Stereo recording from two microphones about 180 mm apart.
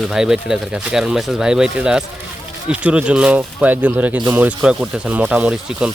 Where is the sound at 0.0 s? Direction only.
5° right (ahead or behind).